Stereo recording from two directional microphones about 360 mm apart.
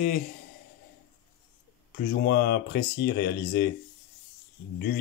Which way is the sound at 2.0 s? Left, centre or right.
Left.